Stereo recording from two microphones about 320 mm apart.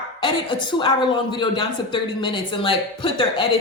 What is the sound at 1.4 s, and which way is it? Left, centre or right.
Speech, centre.